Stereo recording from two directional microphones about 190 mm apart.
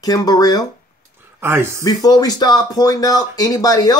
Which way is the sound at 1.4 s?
15° right (ahead or behind).